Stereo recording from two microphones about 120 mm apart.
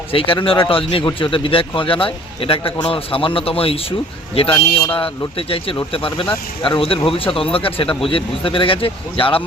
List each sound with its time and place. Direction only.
0.1 s a man's voice: 50° left (ahead or behind)